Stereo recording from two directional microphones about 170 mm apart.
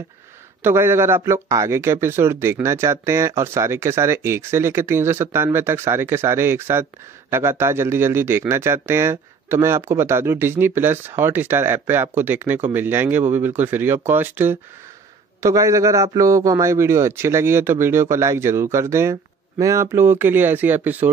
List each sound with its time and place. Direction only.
0.6 s a man's voice: 15° right (ahead or behind)